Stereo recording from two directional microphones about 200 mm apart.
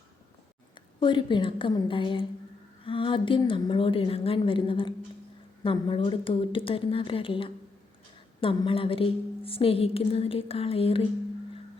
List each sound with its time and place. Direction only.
0.9 s a woman's voice: 25° left (ahead or behind)